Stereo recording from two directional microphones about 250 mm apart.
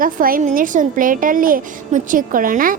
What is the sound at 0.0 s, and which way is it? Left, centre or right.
A woman's voice, right.